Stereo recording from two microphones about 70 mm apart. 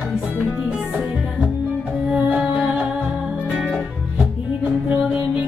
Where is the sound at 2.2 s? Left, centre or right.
Centre.